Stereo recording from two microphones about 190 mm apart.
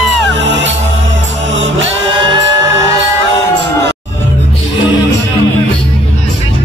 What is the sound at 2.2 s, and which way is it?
Music, 20° right (ahead or behind).